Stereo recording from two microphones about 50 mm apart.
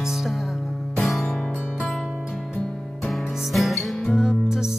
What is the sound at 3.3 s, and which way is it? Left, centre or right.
Music, centre.